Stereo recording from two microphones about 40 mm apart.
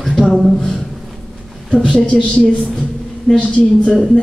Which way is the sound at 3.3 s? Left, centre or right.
Left.